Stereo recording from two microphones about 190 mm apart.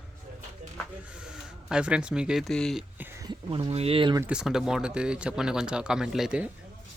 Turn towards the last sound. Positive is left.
turn(degrees=-5)  # may be behind; listen again after turning